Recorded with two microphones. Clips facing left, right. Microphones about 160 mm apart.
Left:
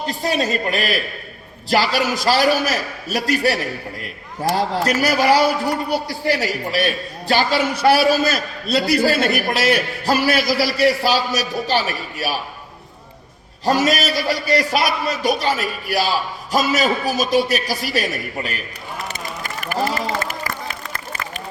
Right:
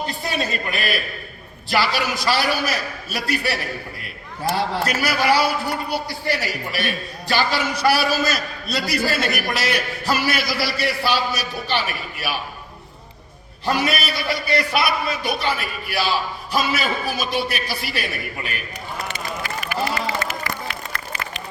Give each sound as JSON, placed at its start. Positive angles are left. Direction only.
{"t": 0.1, "sound": "a man's voice", "side_deg": 40}
{"t": 13.7, "sound": "a man's voice", "side_deg": 40}
{"t": 19.0, "sound": "a sound", "side_deg": 45}